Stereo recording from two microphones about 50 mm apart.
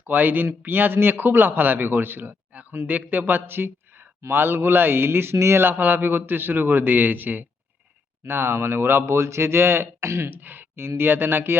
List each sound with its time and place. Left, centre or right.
0.1 s a man's voice: right
2.5 s a sound: right
2.8 s a man's voice: right
5.6 s a man's voice: right
8.3 s speech: right
10.2 s a man's voice: right